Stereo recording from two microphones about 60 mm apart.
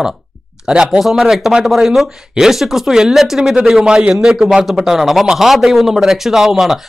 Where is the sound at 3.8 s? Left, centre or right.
Centre.